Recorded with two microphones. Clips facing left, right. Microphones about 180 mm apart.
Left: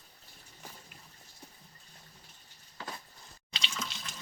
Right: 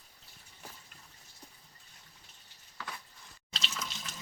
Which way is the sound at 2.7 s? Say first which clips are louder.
Left 2 dB; 30° left (ahead or behind).